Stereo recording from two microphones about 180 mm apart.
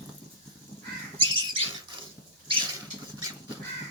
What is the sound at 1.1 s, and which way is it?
Bird, 30° right (ahead or behind).